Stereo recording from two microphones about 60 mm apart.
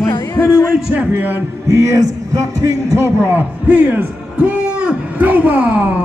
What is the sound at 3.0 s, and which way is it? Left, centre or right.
Speech, right.